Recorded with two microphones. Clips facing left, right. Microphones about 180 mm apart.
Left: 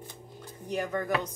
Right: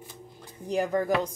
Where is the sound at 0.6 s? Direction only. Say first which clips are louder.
Right 5 dB; 30° right (ahead or behind).